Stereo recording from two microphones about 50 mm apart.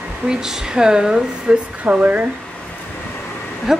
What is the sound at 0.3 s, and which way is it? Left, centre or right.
Speech, centre.